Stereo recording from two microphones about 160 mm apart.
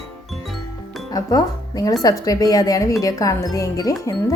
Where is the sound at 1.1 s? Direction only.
25° left (ahead or behind).